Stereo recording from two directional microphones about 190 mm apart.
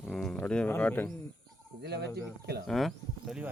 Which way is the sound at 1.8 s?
60° right (ahead or behind).